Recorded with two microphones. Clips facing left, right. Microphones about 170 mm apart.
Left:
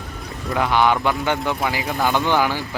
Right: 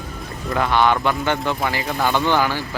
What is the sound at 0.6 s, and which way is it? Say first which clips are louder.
Speech: even; 15° left (ahead or behind).